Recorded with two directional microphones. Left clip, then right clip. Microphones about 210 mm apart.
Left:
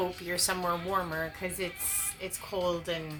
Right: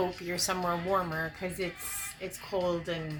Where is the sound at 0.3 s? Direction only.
10° left (ahead or behind).